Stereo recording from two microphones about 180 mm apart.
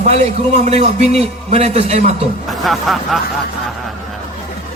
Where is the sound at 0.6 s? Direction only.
35° right (ahead or behind).